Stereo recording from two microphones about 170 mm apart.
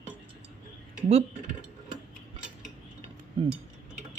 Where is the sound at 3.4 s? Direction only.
25° right (ahead or behind).